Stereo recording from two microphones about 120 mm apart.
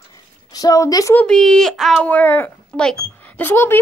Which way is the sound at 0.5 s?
30° left (ahead or behind).